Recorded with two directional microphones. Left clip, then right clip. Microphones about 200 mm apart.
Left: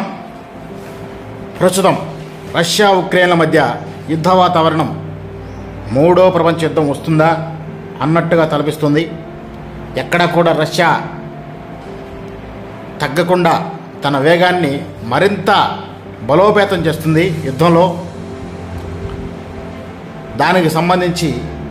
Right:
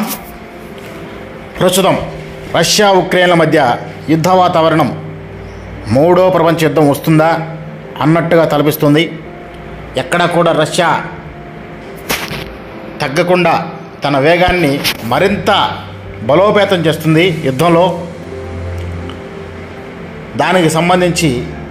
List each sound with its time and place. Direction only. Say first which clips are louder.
1.6 s a man's voice: right 1 dB; 10° right (ahead or behind)
5.9 s a man's voice: right 1 dB; 20° right (ahead or behind)
8.0 s a man's voice: right 3 dB; 20° right (ahead or behind)
9.9 s a man's voice: right 1 dB; 5° right (ahead or behind)
13.0 s a man's voice: right 2 dB; centre (ahead or behind)
20.3 s a man's voice: right 1 dB; 10° right (ahead or behind)